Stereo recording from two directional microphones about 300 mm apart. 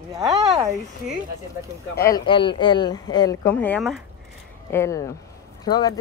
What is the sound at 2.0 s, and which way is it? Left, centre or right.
Speech, centre.